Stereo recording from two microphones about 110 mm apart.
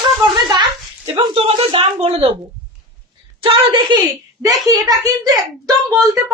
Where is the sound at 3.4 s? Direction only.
45° right (ahead or behind).